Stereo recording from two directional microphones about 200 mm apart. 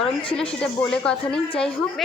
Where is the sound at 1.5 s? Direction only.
25° left (ahead or behind).